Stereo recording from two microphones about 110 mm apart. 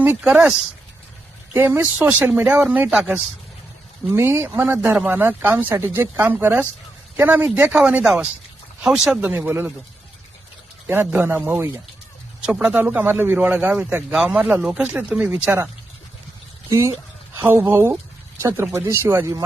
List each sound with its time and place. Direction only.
0.0 s a man's voice: 10° right (ahead or behind)
1.5 s a man's voice: 20° right (ahead or behind)
4.1 s a man's voice: 20° right (ahead or behind); by 9.3 s 5° right (ahead or behind)
9.3 s speech: 20° right (ahead or behind)
10.8 s speech: 20° right (ahead or behind)
12.4 s a man's voice: 10° right (ahead or behind)
16.6 s speech: 25° right (ahead or behind)